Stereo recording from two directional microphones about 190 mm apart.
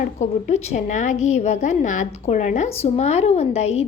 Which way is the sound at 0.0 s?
40° left (ahead or behind).